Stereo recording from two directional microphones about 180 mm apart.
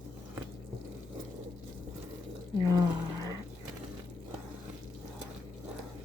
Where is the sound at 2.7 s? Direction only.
20° right (ahead or behind).